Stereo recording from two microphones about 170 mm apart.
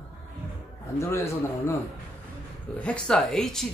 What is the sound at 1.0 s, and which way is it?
Speech, 15° left (ahead or behind).